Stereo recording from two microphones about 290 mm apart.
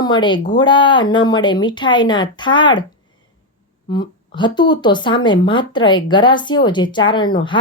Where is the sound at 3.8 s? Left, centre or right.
Centre.